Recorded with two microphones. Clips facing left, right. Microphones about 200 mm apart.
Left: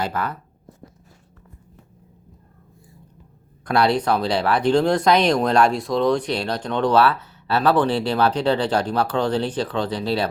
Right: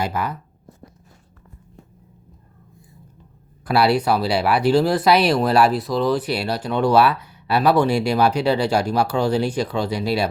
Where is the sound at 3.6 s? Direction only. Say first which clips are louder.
Right 1 dB; 5° right (ahead or behind).